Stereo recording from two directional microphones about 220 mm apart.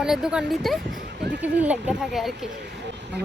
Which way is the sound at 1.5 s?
5° right (ahead or behind).